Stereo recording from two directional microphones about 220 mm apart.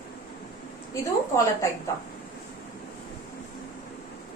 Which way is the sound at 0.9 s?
15° left (ahead or behind).